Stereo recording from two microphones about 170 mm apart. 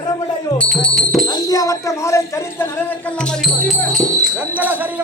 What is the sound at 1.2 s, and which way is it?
Speech, 20° left (ahead or behind).